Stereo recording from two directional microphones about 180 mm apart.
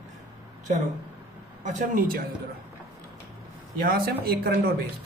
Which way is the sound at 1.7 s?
50° right (ahead or behind).